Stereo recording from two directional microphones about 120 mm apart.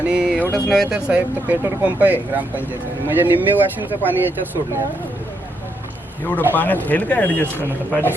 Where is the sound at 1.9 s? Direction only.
15° right (ahead or behind).